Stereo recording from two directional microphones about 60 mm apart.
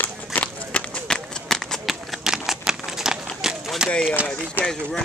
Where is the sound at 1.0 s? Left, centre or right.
Centre.